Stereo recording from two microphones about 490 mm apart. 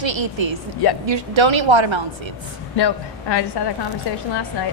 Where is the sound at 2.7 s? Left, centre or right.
Left.